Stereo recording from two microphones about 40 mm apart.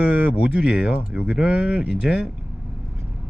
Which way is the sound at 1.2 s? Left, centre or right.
Right.